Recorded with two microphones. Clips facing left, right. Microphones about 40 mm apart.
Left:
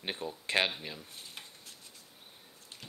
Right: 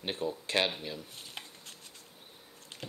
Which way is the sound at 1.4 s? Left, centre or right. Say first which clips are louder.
Right 5 dB; right.